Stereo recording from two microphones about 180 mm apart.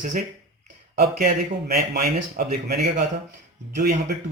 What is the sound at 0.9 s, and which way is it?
A man's voice, 60° right (ahead or behind).